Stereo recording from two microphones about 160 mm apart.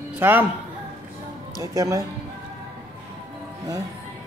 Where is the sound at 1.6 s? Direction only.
20° right (ahead or behind).